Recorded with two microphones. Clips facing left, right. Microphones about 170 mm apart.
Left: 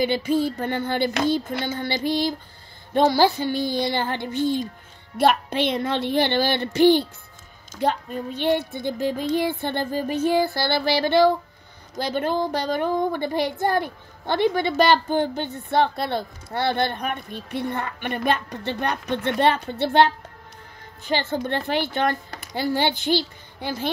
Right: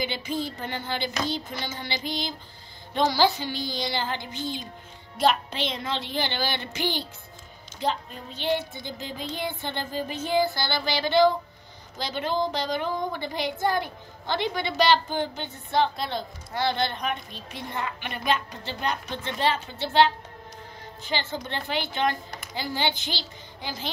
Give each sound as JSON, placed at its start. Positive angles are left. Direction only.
{"t": 0.0, "sound": "a sound", "side_deg": 55}
{"t": 2.9, "sound": "speech", "side_deg": 50}
{"t": 7.8, "sound": "speech", "side_deg": 55}
{"t": 21.1, "sound": "speech", "side_deg": 55}